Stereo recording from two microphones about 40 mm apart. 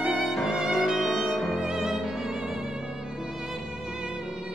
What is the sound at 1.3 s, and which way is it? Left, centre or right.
Music, centre.